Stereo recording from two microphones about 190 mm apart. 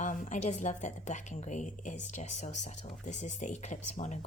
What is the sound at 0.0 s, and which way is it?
A woman's voice, 40° left (ahead or behind).